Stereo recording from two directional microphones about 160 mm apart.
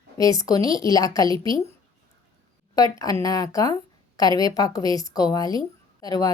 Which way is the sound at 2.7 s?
25° left (ahead or behind).